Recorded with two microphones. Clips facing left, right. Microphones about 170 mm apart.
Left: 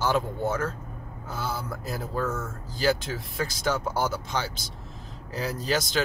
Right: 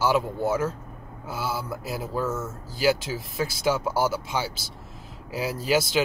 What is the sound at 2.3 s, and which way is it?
Speech, 25° right (ahead or behind).